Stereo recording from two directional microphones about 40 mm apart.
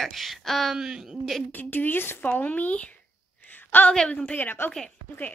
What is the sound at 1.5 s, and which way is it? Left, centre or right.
Speech, left.